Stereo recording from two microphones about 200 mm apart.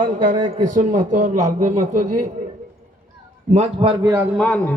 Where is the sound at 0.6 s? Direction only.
40° right (ahead or behind).